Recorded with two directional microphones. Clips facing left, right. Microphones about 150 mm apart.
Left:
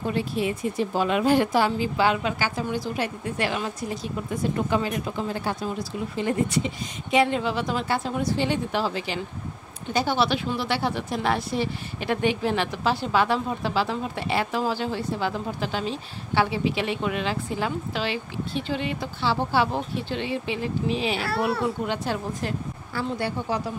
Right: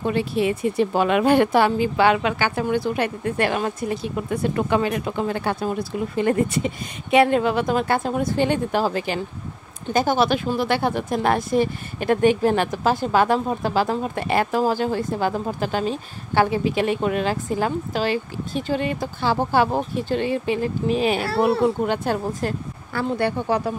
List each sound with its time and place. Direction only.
0.0 s speech: 70° right (ahead or behind)